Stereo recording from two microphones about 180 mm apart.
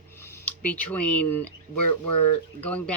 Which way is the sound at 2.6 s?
10° left (ahead or behind).